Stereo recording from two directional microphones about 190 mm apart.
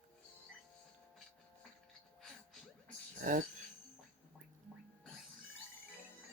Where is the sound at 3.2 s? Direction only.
45° right (ahead or behind).